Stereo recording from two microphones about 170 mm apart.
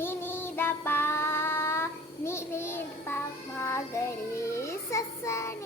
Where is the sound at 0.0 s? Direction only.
15° left (ahead or behind).